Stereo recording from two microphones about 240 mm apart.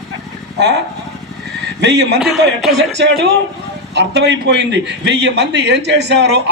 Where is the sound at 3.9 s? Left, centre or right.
Right.